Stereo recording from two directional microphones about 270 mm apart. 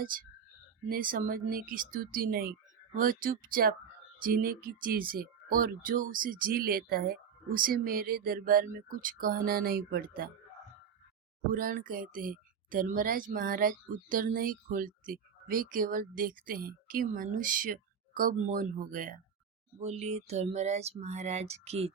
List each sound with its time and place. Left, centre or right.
0.0 s speech: right
11.4 s speech: right
19.8 s a sound: right